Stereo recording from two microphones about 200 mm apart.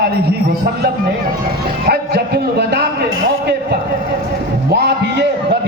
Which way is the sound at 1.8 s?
55° right (ahead or behind).